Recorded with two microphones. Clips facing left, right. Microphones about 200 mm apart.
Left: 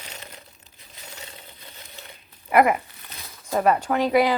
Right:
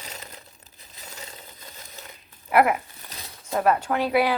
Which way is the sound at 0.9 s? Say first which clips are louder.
Even; 40° right (ahead or behind).